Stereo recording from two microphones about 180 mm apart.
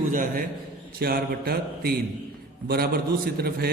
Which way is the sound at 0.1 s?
50° right (ahead or behind).